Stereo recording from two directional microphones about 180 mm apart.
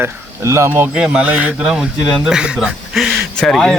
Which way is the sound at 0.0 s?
15° right (ahead or behind).